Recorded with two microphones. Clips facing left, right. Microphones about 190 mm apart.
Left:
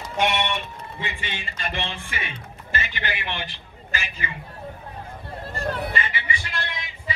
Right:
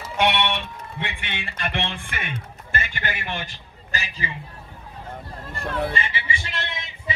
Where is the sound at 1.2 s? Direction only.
60° right (ahead or behind); by 4.3 s 40° right (ahead or behind).